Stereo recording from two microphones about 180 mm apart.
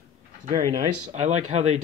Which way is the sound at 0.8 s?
40° right (ahead or behind).